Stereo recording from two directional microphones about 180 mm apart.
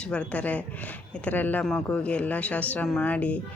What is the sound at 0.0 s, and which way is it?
A man's voice, 5° left (ahead or behind).